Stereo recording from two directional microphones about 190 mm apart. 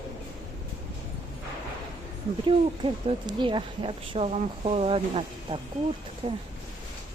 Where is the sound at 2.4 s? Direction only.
25° right (ahead or behind).